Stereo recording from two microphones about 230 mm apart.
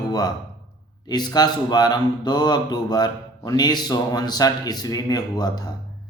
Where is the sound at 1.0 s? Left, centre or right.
Centre.